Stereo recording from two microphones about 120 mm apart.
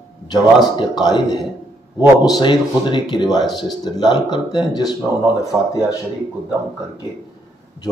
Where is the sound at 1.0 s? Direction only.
35° left (ahead or behind).